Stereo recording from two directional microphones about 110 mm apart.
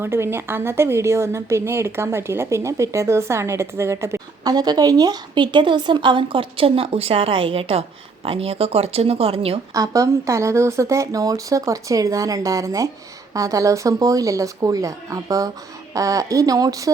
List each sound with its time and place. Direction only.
0.0 s a woman's voice: 20° right (ahead or behind)
4.5 s speech: 35° right (ahead or behind); by 9.6 s 60° right (ahead or behind)
9.7 s a woman's voice: 30° right (ahead or behind)